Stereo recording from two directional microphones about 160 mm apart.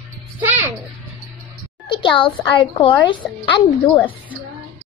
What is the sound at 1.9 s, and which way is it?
A woman's voice, 30° left (ahead or behind).